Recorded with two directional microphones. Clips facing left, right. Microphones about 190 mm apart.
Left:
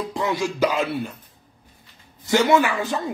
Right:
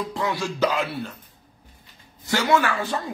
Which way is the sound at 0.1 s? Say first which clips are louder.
Left 3 dB; 20° left (ahead or behind).